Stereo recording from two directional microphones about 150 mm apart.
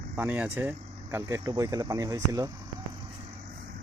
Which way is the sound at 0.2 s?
15° right (ahead or behind).